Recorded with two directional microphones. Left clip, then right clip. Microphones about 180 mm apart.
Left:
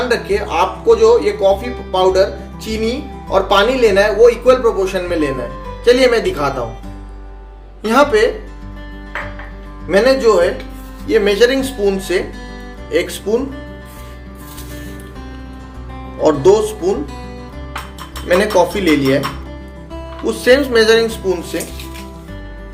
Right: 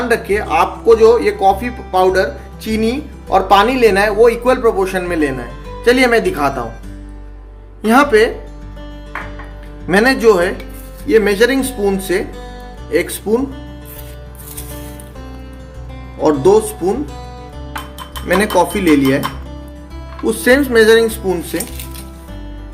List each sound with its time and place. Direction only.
0.1 s speech: 50° right (ahead or behind)
7.9 s speech: 55° right (ahead or behind)
9.9 s speech: 60° right (ahead or behind)
16.2 s speech: 55° right (ahead or behind)
18.7 s speech: 45° right (ahead or behind)
20.2 s speech: 45° right (ahead or behind)